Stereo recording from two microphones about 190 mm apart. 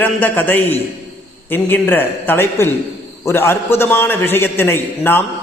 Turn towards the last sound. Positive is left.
turn(degrees=10)  # may be behind; listen again after turning